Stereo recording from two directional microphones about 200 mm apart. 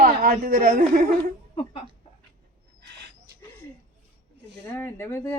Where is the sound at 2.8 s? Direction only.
60° right (ahead or behind).